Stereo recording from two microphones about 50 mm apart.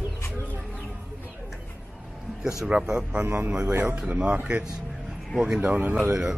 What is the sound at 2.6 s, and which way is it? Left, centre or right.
Speech, centre.